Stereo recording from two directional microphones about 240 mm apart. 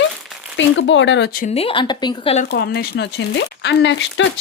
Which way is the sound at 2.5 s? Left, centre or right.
Left.